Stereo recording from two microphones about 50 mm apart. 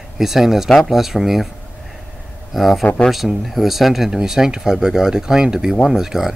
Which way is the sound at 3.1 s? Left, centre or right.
Centre.